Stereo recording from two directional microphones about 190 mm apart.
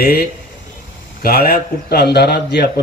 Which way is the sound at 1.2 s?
50° left (ahead or behind).